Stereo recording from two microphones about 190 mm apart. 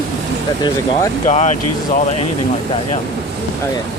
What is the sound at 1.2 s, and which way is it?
Speech, 35° left (ahead or behind).